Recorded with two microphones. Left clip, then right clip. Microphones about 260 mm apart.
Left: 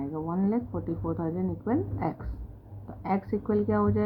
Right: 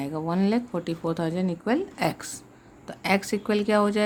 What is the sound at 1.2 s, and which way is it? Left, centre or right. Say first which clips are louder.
Speech: right 4 dB; right.